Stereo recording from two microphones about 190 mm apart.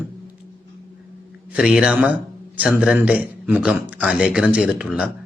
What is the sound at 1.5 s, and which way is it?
A man's voice, 5° right (ahead or behind).